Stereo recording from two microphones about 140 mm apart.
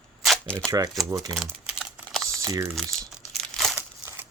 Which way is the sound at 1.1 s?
25° right (ahead or behind).